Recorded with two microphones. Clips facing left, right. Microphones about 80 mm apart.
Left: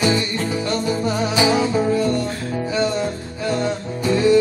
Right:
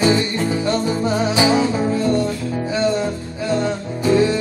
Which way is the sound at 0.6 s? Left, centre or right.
Right.